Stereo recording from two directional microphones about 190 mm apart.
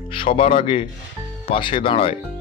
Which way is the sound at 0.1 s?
25° left (ahead or behind).